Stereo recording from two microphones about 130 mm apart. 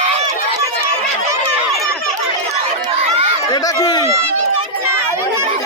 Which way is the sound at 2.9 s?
50° right (ahead or behind).